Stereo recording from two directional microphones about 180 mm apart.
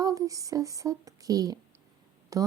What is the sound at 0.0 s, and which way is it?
Speech, 20° right (ahead or behind).